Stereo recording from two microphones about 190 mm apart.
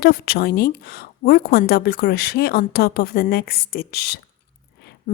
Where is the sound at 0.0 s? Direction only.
50° left (ahead or behind).